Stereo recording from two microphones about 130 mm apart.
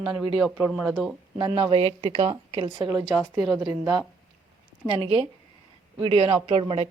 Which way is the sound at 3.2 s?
Centre (ahead or behind).